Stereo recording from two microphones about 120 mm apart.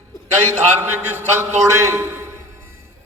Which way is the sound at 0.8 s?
20° right (ahead or behind).